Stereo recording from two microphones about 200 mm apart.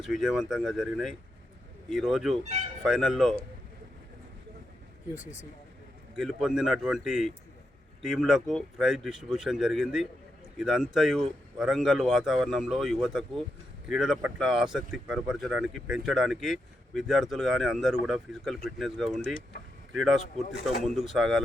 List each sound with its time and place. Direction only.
0.0 s speech: centre (ahead or behind)
5.2 s speech: 60° right (ahead or behind)
6.1 s speech: centre (ahead or behind)